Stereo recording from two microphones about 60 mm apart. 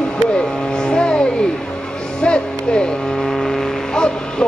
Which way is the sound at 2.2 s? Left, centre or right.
Centre.